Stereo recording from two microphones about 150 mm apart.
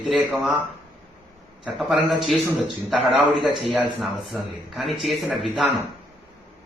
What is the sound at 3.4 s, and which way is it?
A man's voice, centre (ahead or behind).